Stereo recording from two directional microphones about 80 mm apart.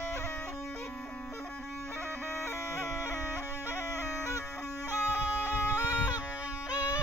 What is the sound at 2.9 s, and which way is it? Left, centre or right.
Music, left.